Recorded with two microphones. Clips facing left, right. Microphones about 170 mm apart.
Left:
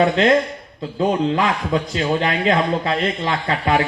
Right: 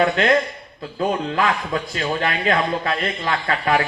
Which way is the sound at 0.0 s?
25° left (ahead or behind).